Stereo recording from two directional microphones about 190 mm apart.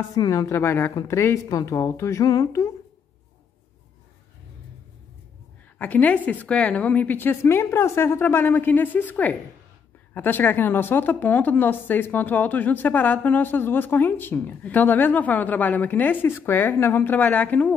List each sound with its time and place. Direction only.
0.1 s a woman's voice: 20° left (ahead or behind)
5.8 s a woman's voice: 10° left (ahead or behind)